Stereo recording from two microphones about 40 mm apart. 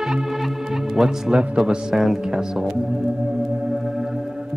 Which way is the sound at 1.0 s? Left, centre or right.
Centre.